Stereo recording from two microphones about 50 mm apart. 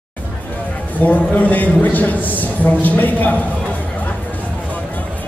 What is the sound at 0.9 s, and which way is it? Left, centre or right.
A man's voice, left.